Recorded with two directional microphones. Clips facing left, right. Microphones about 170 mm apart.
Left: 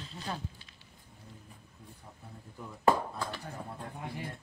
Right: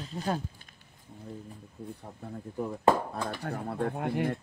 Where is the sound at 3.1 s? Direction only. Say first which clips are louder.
Right 5 dB; 70° right (ahead or behind).